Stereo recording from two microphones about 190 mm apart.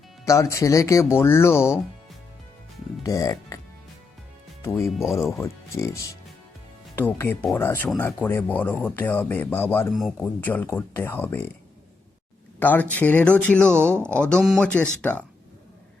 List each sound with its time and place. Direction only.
0.3 s speech: 15° left (ahead or behind)
3.0 s speech: 20° left (ahead or behind)
5.4 s speech: 15° left (ahead or behind)
9.9 s speech: centre (ahead or behind)
12.5 s speech: 10° left (ahead or behind)